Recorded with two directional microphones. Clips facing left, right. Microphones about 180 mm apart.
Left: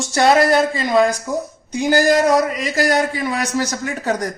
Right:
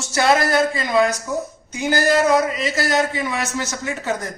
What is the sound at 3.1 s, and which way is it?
Speech, 40° left (ahead or behind).